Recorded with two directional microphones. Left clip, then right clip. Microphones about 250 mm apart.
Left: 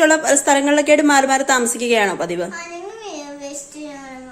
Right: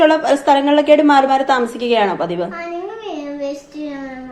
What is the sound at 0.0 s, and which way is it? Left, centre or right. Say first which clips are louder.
A woman's voice: right 2 dB; left.